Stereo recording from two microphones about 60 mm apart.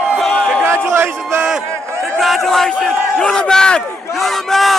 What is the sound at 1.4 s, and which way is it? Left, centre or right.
Crowd, centre.